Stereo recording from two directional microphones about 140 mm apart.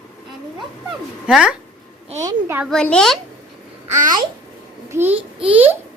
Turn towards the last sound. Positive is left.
turn(degrees=-15)  # may be behind; listen again after turning